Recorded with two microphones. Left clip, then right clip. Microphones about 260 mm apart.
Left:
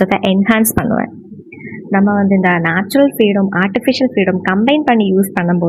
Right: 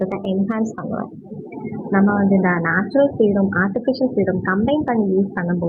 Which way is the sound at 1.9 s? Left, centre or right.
Left.